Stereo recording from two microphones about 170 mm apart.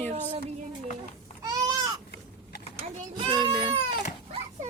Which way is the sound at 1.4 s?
20° right (ahead or behind).